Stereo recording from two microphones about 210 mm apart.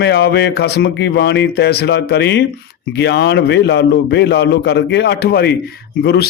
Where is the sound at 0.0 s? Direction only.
50° left (ahead or behind).